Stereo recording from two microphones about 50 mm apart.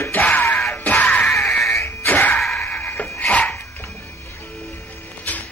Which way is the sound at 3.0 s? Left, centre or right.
Left.